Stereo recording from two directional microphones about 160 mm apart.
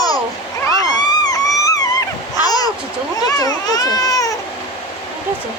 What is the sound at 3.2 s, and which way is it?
Children playing, 20° left (ahead or behind).